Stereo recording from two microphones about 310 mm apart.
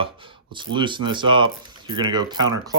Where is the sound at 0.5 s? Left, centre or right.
Centre.